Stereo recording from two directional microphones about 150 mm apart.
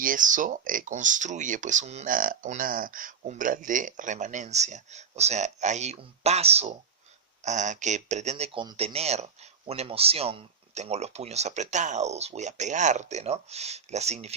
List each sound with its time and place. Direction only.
0.0 s speech: 65° right (ahead or behind)
2.0 s speech: 65° right (ahead or behind); by 8.4 s 50° right (ahead or behind)
8.5 s speech: 35° right (ahead or behind)